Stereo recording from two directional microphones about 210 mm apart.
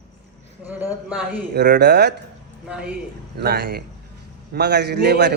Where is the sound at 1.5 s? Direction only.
55° right (ahead or behind).